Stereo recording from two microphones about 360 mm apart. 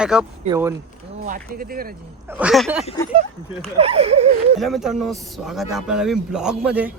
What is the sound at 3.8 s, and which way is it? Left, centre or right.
Speech, centre.